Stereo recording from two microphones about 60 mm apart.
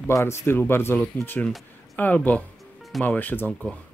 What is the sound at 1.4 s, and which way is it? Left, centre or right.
Speech, left.